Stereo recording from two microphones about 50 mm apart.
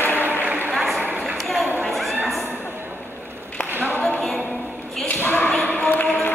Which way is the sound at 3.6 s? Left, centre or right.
Left.